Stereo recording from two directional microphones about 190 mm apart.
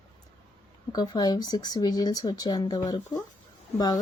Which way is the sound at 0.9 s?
20° left (ahead or behind).